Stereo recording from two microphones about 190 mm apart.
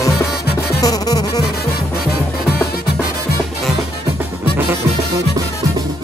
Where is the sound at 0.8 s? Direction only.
20° left (ahead or behind).